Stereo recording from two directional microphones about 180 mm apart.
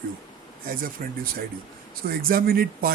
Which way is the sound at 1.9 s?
55° right (ahead or behind).